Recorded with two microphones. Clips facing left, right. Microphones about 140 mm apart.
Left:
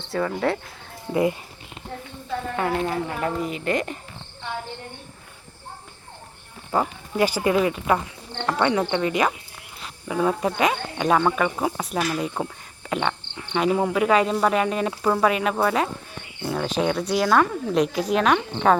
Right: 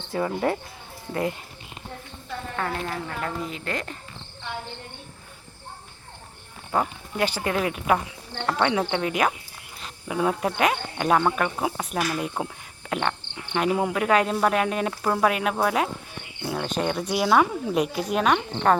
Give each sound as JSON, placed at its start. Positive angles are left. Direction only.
{"t": 0.2, "sound": "speech", "side_deg": -20}
{"t": 1.1, "sound": "speech", "side_deg": 5}
{"t": 2.6, "sound": "speech", "side_deg": 15}
{"t": 3.4, "sound": "insect", "side_deg": 5}
{"t": 6.7, "sound": "insect", "side_deg": 5}
{"t": 8.4, "sound": "speech", "side_deg": -10}
{"t": 8.6, "sound": "insect", "side_deg": -5}